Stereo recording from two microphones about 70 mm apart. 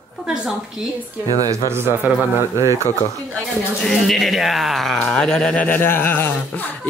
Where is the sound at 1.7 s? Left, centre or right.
Right.